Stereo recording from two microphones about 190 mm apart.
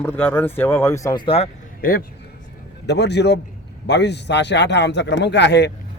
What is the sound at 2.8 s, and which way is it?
A man's voice, 60° left (ahead or behind).